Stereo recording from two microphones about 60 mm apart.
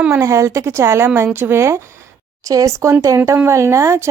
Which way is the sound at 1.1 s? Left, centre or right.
Right.